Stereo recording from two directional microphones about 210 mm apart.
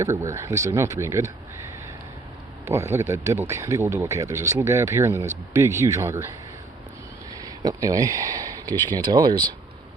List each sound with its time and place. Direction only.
0.0 s speech: 15° right (ahead or behind)
2.6 s speech: 15° right (ahead or behind)
7.4 s speech: 20° right (ahead or behind)